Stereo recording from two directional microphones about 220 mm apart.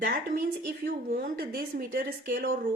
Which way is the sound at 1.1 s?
45° right (ahead or behind).